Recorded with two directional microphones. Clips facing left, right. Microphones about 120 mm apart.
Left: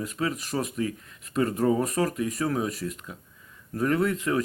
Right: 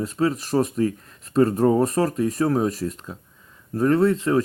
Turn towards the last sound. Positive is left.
turn(degrees=-30)  # may be behind; listen again after turning